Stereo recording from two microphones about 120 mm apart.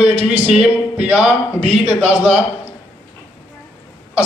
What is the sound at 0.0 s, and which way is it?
Speech, 60° right (ahead or behind).